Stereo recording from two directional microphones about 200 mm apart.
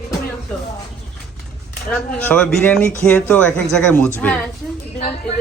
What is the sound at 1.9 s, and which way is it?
Speech, 5° left (ahead or behind).